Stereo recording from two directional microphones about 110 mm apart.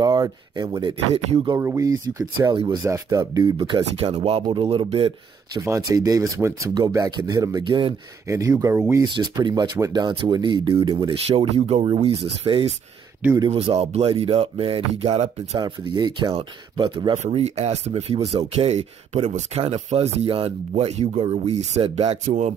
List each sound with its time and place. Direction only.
0.0 s speech: 35° right (ahead or behind)
1.6 s speech: 30° right (ahead or behind)
2.5 s speech: 50° right (ahead or behind)
2.8 s speech: 30° right (ahead or behind)
3.5 s speech: 50° right (ahead or behind)
5.5 s speech: 30° right (ahead or behind); by 7.9 s 45° right (ahead or behind)
8.3 s speech: 30° right (ahead or behind)
8.7 s speech: 20° right (ahead or behind)
9.0 s speech: 40° right (ahead or behind)
10.0 s speech: 45° right (ahead or behind)
11.2 s speech: 65° right (ahead or behind)
13.7 s speech: 70° right (ahead or behind)
15.6 s speech: 45° right (ahead or behind)
17.4 s speech: 75° right (ahead or behind)